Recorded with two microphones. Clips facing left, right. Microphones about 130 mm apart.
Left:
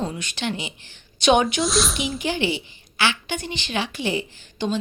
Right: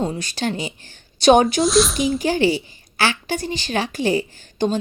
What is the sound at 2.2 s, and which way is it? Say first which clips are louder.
A woman's voice: right 5 dB; 40° right (ahead or behind).